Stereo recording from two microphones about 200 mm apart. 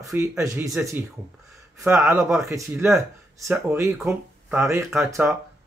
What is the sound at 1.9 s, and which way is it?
A man's voice, 10° right (ahead or behind).